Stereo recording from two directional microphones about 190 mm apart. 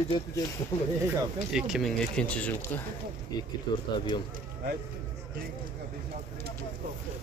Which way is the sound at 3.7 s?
25° left (ahead or behind).